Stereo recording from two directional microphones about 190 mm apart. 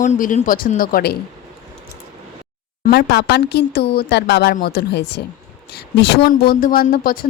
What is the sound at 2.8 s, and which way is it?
Speech, 55° left (ahead or behind).